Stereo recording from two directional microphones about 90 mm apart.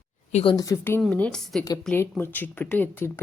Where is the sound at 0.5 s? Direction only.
40° left (ahead or behind).